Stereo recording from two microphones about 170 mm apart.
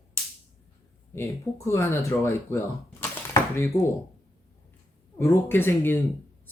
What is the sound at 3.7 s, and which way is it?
Speech, 35° left (ahead or behind).